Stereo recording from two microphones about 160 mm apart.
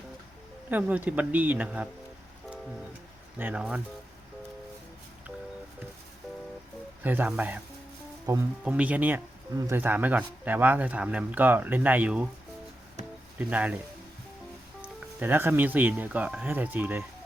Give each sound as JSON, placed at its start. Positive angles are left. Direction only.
{"t": 0.7, "sound": "speech", "side_deg": -10}
{"t": 3.3, "sound": "speech", "side_deg": -10}
{"t": 7.0, "sound": "speech", "side_deg": -10}
{"t": 13.4, "sound": "speech", "side_deg": -10}
{"t": 14.8, "sound": "speech", "side_deg": -10}